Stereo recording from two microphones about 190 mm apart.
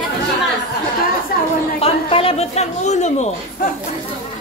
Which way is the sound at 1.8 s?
30° left (ahead or behind).